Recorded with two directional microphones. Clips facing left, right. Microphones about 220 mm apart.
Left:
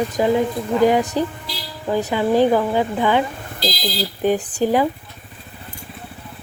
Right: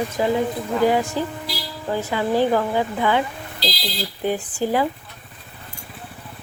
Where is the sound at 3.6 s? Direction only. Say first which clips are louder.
Left 3 dB; 50° left (ahead or behind).